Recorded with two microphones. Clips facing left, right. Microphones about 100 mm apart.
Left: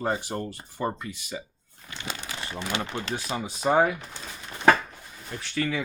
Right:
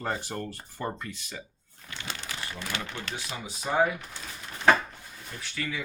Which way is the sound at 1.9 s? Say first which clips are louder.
Left 2 dB; 20° left (ahead or behind).